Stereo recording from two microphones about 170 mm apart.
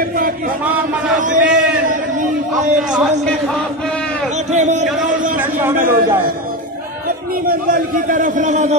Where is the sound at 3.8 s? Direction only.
5° left (ahead or behind).